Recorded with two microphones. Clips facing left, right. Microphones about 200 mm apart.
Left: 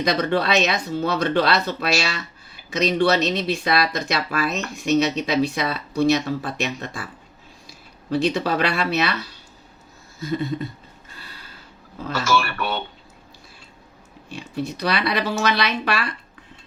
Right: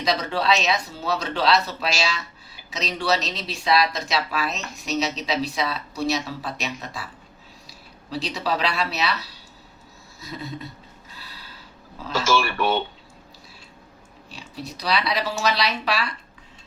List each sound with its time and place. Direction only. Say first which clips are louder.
0.0 s speech: left 3 dB; 55° left (ahead or behind)
8.1 s speech: left 6 dB; 55° left (ahead or behind)
10.2 s speech: left 9 dB; 50° left (ahead or behind)
12.4 s speech: right 3 dB; 15° right (ahead or behind)
14.3 s speech: left 8 dB; 50° left (ahead or behind)